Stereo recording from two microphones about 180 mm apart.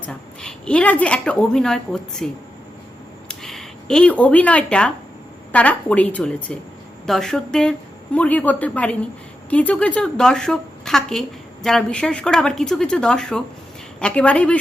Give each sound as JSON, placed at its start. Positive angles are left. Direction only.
{"t": 0.0, "sound": "a woman's voice", "side_deg": 5}